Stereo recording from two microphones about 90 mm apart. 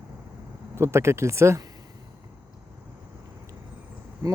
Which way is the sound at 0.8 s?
30° right (ahead or behind).